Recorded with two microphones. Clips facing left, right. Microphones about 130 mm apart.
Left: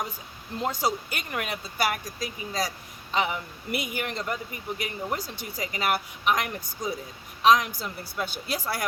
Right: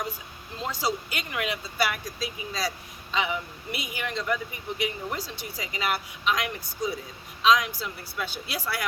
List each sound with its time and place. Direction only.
0.7 s a woman's voice: 50° left (ahead or behind)